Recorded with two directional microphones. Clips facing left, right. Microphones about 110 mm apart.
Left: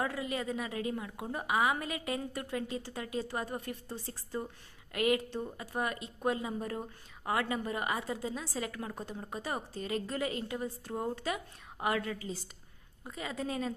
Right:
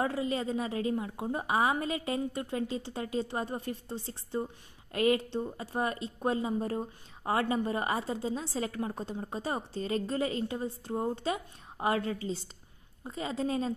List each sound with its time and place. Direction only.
0.0 s a woman's voice: 30° right (ahead or behind)